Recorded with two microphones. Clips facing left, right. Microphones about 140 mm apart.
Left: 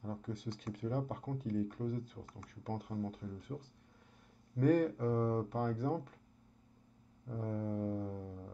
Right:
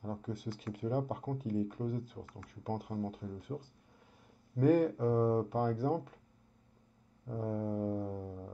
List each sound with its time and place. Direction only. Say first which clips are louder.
0.0 s speech: right 2 dB; 5° right (ahead or behind)
7.2 s speech: right 3 dB; 5° right (ahead or behind)
8.2 s music: right 3 dB; 20° right (ahead or behind)